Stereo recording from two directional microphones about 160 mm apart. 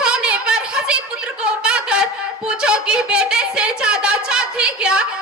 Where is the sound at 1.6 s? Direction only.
5° right (ahead or behind).